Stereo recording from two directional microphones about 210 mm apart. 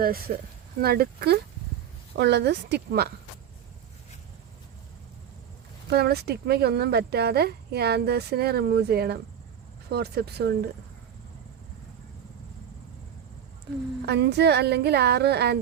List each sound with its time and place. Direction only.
0.0 s speech: 45° right (ahead or behind)
5.9 s speech: 50° right (ahead or behind)
14.0 s speech: 50° right (ahead or behind)